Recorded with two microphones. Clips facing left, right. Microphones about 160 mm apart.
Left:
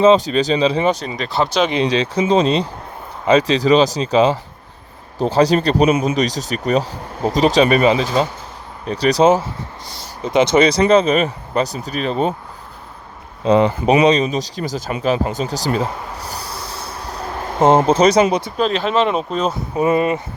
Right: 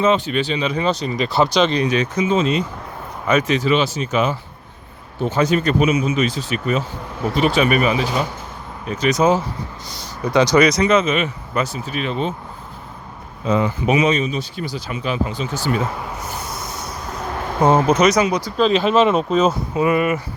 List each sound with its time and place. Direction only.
0.0 s speech: 30° left (ahead or behind)
1.0 s speech: 5° right (ahead or behind)
1.7 s speech: 30° left (ahead or behind)
5.9 s speech: 55° left (ahead or behind)
6.1 s speech: 40° left (ahead or behind)
10.2 s speech: 25° left (ahead or behind); by 12.3 s 40° left (ahead or behind)
14.0 s speech: 35° left (ahead or behind)
15.2 s a sound: 45° left (ahead or behind); by 18.5 s 25° left (ahead or behind)
18.5 s speech: centre (ahead or behind)
19.8 s speech: 25° left (ahead or behind)